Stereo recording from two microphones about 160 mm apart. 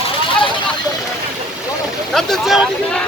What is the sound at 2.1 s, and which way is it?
Speech, centre (ahead or behind).